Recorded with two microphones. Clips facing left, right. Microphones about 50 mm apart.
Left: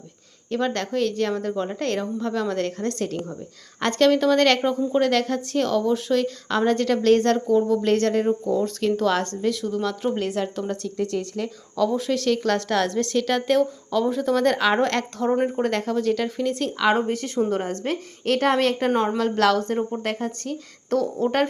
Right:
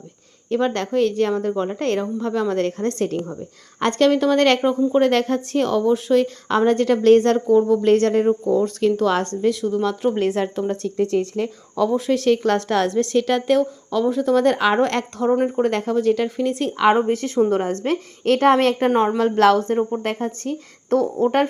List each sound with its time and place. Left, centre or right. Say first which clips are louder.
0.5 s speech: right 4 dB; centre
3.8 s a woman's voice: right 2 dB; centre
4.9 s a woman's voice: right 2 dB; right; by 10.1 s centre
10.2 s a woman's voice: right 5 dB; right; by 15.6 s centre
15.6 s a woman's voice: right 4 dB; centre
17.1 s a woman's voice: right 5 dB; right
18.9 s speech: right 4 dB; right